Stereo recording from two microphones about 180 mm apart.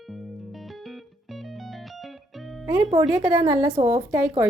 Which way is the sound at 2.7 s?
20° right (ahead or behind).